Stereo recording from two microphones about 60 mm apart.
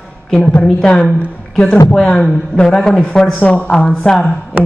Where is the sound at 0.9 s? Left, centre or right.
Centre.